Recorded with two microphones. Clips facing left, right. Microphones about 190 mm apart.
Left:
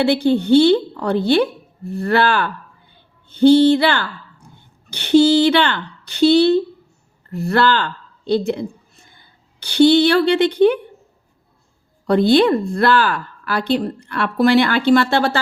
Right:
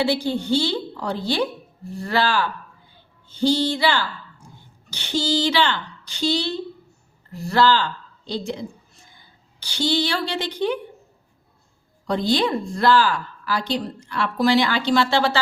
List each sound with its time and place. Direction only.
0.0 s a woman's voice: 60° left (ahead or behind)
12.0 s a woman's voice: 60° left (ahead or behind)